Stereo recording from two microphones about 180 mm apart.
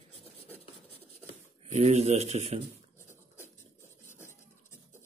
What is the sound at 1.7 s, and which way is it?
Speech, 35° right (ahead or behind).